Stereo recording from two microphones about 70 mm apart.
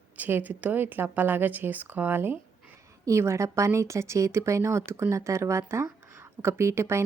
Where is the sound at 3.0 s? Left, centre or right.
Right.